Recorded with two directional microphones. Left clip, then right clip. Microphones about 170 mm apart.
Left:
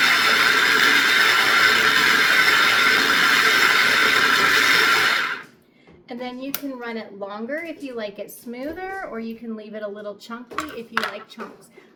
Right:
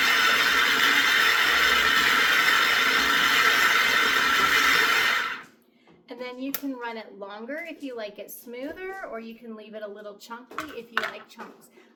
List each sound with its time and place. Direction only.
0.0 s a sound: 15° left (ahead or behind)
6.1 s clapping: 20° right (ahead or behind)
6.7 s a woman's voice: 20° right (ahead or behind)
10.9 s speech: 25° left (ahead or behind)